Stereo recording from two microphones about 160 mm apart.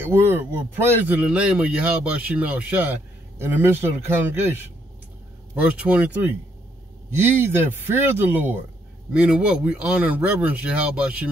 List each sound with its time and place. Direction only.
0.0 s speech: 15° right (ahead or behind)
5.5 s speech: 10° right (ahead or behind)